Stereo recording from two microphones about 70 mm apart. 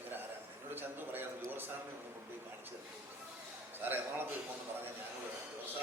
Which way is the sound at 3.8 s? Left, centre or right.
Right.